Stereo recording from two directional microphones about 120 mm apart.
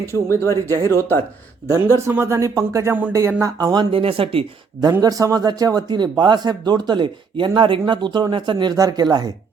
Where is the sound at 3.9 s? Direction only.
50° right (ahead or behind).